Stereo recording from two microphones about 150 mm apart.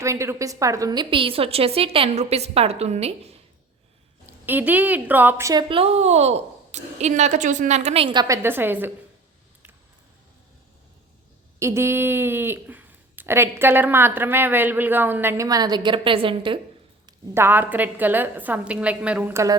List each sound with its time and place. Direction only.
0.0 s a woman's voice: 20° right (ahead or behind); by 3.1 s 45° right (ahead or behind)
4.3 s speech: 10° right (ahead or behind)
5.6 s a woman's voice: 40° right (ahead or behind)
8.0 s a woman's voice: 30° right (ahead or behind)
8.4 s speech: 15° right (ahead or behind)
11.6 s speech: 15° right (ahead or behind); by 16.6 s 35° right (ahead or behind)
17.3 s speech: 15° right (ahead or behind)